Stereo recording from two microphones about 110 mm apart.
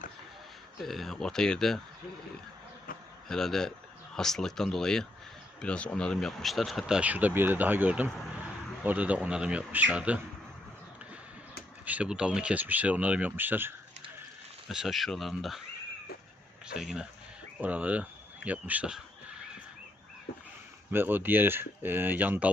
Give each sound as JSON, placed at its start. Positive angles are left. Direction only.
{"t": 0.8, "sound": "speech", "side_deg": 0}
{"t": 3.2, "sound": "speech", "side_deg": 5}
{"t": 11.9, "sound": "speech", "side_deg": -10}
{"t": 14.7, "sound": "speech", "side_deg": -5}
{"t": 16.7, "sound": "speech", "side_deg": -5}
{"t": 20.9, "sound": "speech", "side_deg": -20}